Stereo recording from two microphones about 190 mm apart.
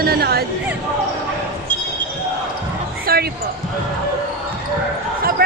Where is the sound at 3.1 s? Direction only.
50° right (ahead or behind).